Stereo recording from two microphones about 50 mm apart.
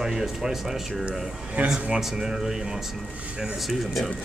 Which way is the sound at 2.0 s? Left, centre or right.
Centre.